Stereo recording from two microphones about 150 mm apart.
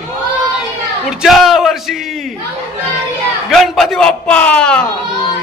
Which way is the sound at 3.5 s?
Centre (ahead or behind).